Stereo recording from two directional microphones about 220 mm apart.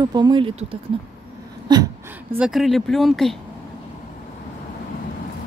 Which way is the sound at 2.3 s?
5° right (ahead or behind).